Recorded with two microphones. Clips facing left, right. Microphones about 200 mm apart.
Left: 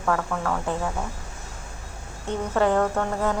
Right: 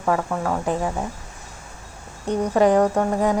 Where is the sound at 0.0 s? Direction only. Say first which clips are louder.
Right 3 dB; 20° right (ahead or behind).